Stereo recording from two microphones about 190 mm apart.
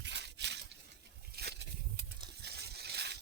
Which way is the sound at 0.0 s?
65° right (ahead or behind).